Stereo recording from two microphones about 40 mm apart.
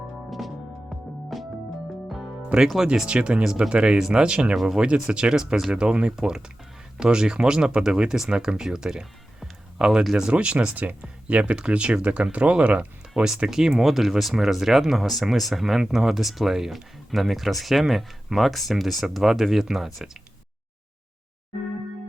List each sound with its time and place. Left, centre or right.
0.3 s music: centre
2.7 s speech: centre
13.5 s speech: centre